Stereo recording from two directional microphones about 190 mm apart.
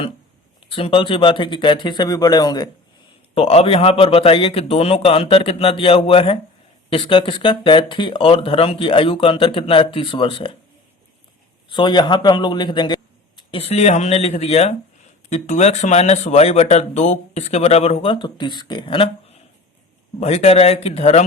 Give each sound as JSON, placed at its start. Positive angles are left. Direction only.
{"t": 0.7, "sound": "speech", "side_deg": 30}
{"t": 11.7, "sound": "speech", "side_deg": 25}